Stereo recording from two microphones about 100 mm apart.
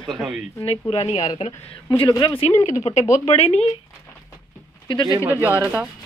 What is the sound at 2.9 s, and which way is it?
Speech, 90° left.